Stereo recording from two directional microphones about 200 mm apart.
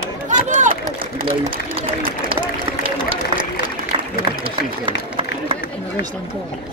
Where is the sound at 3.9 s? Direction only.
25° right (ahead or behind).